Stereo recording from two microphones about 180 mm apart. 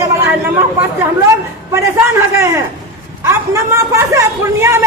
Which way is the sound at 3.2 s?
15° right (ahead or behind).